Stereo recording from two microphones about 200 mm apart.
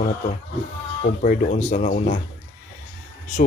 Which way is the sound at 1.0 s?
45° left (ahead or behind).